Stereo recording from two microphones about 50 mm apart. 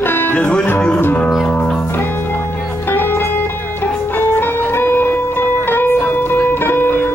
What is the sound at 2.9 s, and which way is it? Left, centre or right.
Music, left.